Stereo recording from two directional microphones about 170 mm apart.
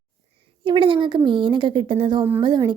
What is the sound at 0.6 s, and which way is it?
A woman's voice, 30° right (ahead or behind).